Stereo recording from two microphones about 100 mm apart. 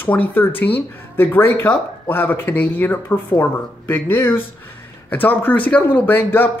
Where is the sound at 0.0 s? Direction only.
15° left (ahead or behind).